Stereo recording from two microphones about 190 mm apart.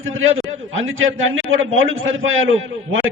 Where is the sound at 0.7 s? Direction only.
90° right.